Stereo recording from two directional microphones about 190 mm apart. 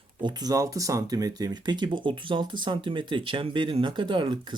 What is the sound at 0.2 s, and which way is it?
Speech, 20° right (ahead or behind).